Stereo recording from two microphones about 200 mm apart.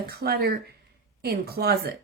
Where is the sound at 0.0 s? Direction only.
50° right (ahead or behind).